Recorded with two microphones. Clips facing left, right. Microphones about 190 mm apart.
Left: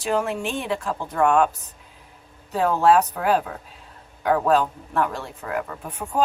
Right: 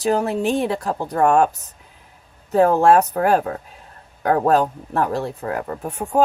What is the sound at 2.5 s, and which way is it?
Speech, 45° right (ahead or behind).